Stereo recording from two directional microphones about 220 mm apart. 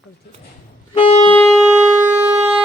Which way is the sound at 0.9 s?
25° left (ahead or behind).